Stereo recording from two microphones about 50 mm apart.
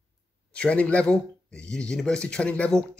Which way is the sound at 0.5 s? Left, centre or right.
Left.